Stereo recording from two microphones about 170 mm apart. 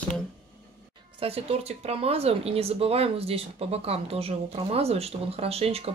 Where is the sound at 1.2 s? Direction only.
35° right (ahead or behind).